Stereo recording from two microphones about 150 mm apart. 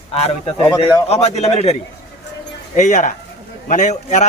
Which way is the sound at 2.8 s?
55° left (ahead or behind).